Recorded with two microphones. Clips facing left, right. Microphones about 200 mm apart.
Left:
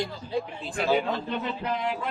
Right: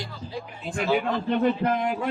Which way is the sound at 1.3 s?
50° right (ahead or behind).